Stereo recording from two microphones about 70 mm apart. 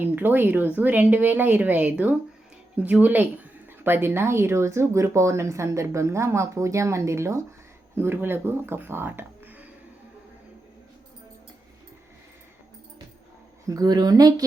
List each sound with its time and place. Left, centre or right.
0.0 s a woman's voice: right
13.7 s speech: right